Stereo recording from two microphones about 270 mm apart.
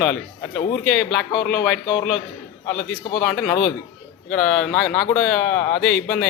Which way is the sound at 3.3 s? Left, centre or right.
Centre.